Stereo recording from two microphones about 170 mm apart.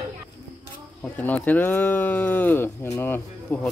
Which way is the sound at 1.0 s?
10° left (ahead or behind).